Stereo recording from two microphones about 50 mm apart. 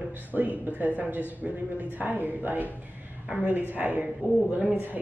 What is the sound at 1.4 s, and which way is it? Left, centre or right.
Speech, centre.